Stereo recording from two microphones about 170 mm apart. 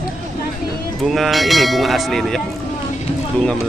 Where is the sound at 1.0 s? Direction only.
Centre (ahead or behind).